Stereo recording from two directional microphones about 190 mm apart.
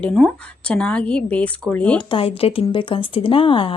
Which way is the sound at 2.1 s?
30° left (ahead or behind).